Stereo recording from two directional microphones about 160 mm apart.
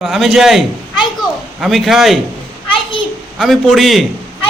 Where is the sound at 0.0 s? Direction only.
Centre (ahead or behind).